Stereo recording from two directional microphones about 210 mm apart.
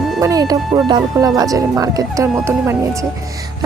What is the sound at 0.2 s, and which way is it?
Speech, 15° right (ahead or behind).